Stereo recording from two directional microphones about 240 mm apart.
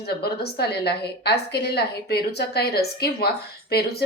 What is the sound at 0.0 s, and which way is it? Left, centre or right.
A woman's voice, left.